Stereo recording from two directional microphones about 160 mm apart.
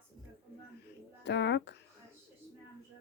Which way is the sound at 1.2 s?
90° left.